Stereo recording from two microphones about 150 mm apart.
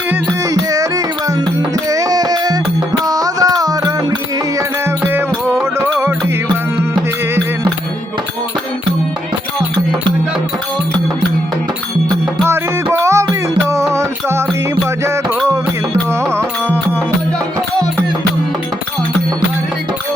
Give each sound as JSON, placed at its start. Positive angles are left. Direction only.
{"t": 0.5, "sound": "music", "side_deg": -25}
{"t": 12.5, "sound": "music", "side_deg": -20}
{"t": 16.3, "sound": "music", "side_deg": -15}